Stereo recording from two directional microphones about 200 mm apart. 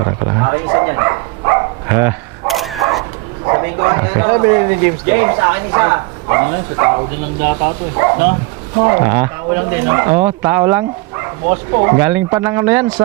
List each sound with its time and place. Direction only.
0.0 s a sound: 20° right (ahead or behind)
2.5 s dog: centre (ahead or behind)
3.4 s speech: 20° right (ahead or behind)
11.4 s speech: 25° right (ahead or behind)
11.9 s speech: 10° right (ahead or behind)